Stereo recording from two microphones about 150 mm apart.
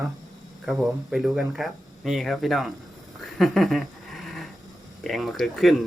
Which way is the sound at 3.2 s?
Centre (ahead or behind).